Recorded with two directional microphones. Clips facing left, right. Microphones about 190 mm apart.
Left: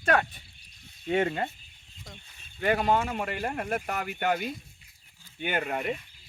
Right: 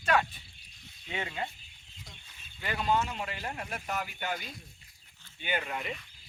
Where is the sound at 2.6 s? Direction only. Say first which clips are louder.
Left 5 dB; 55° left (ahead or behind).